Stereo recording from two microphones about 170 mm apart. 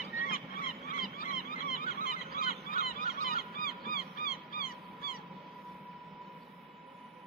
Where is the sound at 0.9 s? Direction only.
60° left (ahead or behind).